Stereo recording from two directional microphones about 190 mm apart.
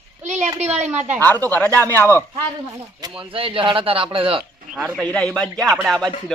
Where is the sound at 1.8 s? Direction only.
10° left (ahead or behind).